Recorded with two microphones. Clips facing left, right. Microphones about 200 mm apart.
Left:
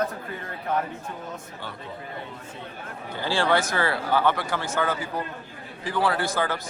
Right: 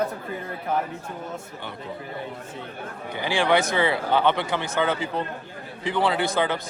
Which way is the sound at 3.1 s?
15° right (ahead or behind).